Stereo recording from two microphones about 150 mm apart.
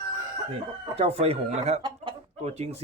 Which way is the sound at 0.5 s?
45° right (ahead or behind).